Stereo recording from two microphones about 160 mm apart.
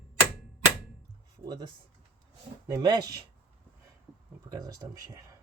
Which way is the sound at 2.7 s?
25° right (ahead or behind).